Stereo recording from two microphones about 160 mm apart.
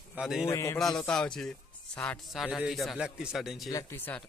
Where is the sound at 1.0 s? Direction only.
5° left (ahead or behind).